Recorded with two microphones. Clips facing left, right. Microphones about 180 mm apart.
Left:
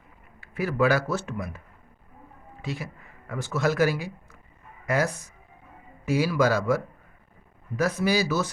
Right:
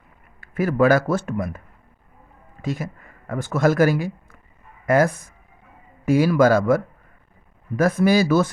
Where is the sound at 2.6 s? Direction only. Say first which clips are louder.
Right 7 dB; 45° right (ahead or behind).